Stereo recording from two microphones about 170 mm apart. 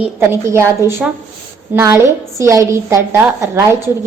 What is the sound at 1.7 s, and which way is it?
A woman's voice, 15° right (ahead or behind).